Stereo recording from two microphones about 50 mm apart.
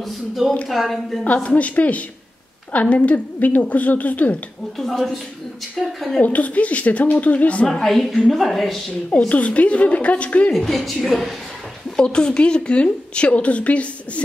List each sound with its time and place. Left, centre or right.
0.7 s a woman's voice: centre
1.2 s a woman's voice: left
5.8 s a woman's voice: centre
6.2 s a woman's voice: left
7.6 s a woman's voice: centre
9.3 s a woman's voice: left
10.5 s a woman's voice: centre
12.0 s a woman's voice: centre